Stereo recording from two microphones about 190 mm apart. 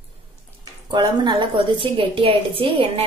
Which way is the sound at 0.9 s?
25° right (ahead or behind).